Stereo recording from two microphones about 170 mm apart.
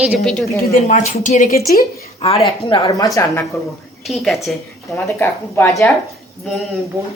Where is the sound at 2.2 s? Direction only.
35° left (ahead or behind).